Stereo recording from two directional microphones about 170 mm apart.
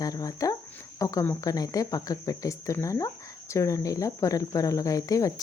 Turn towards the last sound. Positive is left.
turn(degrees=20)  # may be behind; listen again after turning